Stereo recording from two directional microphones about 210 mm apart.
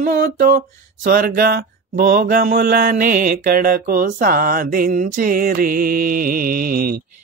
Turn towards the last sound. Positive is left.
turn(degrees=-45)  # may be behind; listen again after turning